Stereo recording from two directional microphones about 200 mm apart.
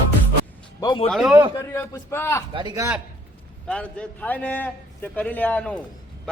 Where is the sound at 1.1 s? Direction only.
Centre (ahead or behind).